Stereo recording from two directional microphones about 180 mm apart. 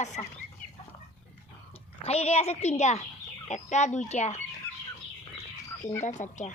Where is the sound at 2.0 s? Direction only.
35° left (ahead or behind).